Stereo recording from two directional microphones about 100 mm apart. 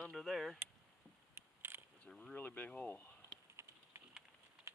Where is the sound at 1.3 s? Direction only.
25° right (ahead or behind).